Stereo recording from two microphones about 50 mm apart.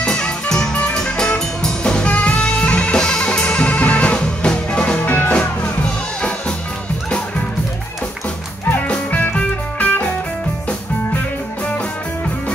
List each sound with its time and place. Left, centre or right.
0.0 s music: centre
5.0 s music: left
9.3 s music: left